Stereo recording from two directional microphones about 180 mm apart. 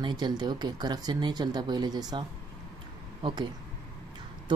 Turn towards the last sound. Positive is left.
turn(degrees=-25)  # may be behind; listen again after turning